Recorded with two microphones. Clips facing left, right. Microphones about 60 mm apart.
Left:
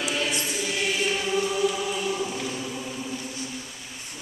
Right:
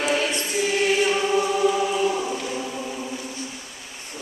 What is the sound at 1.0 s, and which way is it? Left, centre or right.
Choir, right.